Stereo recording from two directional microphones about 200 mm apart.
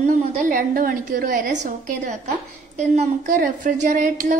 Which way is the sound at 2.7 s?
35° right (ahead or behind).